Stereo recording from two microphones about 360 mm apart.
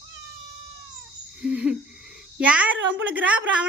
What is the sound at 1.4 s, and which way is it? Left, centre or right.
A woman's voice, centre.